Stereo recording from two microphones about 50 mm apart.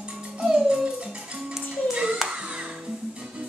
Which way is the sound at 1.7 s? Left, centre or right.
Centre.